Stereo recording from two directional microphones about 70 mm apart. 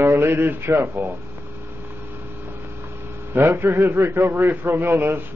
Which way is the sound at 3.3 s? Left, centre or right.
Right.